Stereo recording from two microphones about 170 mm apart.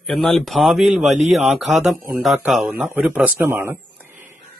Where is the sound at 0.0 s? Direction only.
Centre (ahead or behind).